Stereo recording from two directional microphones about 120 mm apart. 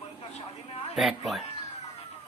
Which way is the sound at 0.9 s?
Centre (ahead or behind).